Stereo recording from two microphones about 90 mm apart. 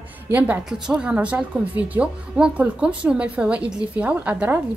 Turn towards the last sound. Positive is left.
turn(degrees=-20)  # may be behind; listen again after turning